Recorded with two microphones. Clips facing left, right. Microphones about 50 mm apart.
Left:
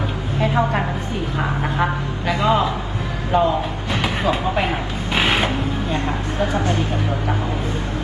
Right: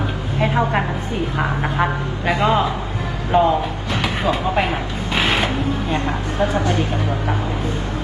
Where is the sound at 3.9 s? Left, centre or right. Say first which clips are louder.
Even; left.